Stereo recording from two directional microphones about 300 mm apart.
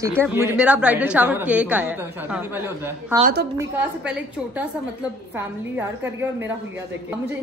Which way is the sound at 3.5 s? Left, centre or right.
Centre.